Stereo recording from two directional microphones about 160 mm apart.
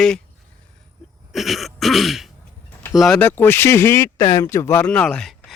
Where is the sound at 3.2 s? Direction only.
15° left (ahead or behind).